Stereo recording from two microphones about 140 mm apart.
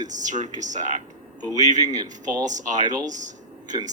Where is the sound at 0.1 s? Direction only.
60° right (ahead or behind).